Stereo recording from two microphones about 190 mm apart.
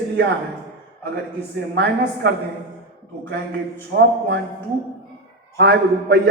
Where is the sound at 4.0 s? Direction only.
65° right (ahead or behind).